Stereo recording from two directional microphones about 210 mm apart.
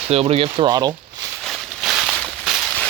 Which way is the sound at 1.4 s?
Centre (ahead or behind).